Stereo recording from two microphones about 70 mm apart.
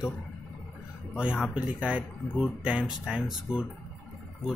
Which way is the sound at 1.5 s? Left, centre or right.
Centre.